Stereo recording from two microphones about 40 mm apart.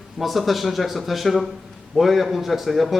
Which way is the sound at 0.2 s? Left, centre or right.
Centre.